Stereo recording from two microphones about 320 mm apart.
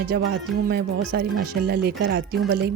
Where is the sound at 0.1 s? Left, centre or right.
Right.